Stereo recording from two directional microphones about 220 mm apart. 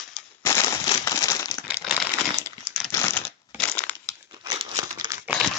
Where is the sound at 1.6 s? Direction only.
Centre (ahead or behind).